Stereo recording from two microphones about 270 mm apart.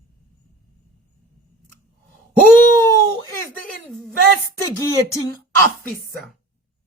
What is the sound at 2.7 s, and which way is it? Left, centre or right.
A woman's voice, centre.